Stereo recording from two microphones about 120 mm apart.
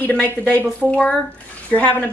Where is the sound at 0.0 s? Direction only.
15° left (ahead or behind).